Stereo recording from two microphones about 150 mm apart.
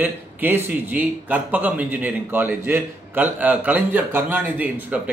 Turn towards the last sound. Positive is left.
turn(degrees=-10)  # may be behind; listen again after turning